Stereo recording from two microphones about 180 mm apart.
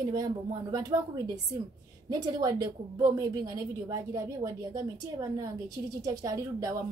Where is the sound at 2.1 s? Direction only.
20° right (ahead or behind).